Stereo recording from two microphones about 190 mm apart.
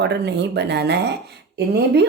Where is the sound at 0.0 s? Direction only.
60° right (ahead or behind).